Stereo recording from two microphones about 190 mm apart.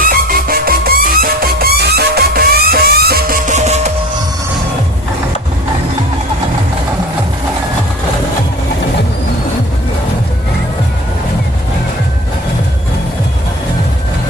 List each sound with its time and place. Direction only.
0.0 s music: 50° right (ahead or behind)